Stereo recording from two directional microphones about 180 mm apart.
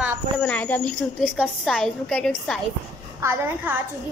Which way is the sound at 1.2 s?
10° right (ahead or behind).